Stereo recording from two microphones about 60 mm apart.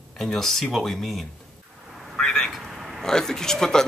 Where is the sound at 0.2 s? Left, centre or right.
Centre.